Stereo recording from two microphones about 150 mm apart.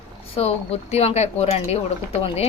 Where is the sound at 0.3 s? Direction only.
45° left (ahead or behind).